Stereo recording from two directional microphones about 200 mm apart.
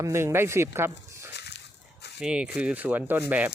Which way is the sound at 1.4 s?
55° left (ahead or behind).